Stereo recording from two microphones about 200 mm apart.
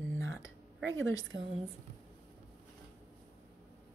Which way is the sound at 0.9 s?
75° right (ahead or behind).